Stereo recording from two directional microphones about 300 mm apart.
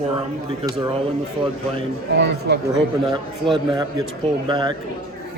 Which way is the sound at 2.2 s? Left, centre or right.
Right.